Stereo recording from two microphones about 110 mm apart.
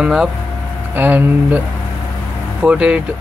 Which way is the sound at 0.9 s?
15° right (ahead or behind).